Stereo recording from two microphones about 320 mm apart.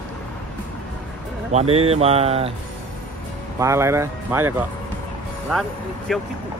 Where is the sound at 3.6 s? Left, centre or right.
Centre.